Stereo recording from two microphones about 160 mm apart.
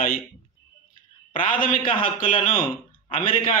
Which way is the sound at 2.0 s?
55° left (ahead or behind).